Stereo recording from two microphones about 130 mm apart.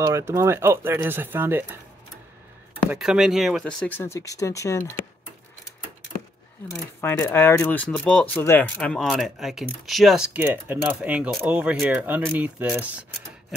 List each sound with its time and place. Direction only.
0.0 s speech: 25° right (ahead or behind)
3.0 s speech: 5° right (ahead or behind)
3.6 s speech: 10° left (ahead or behind)
4.0 s speech: 25° left (ahead or behind)
6.7 s speech: 20° left (ahead or behind)
8.9 s speech: centre (ahead or behind)